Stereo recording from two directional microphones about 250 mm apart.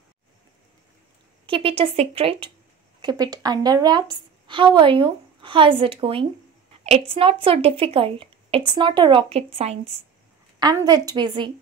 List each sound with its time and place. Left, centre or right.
1.4 s a woman's voice: right